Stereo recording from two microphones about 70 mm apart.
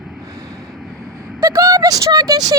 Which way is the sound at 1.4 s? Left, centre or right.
Right.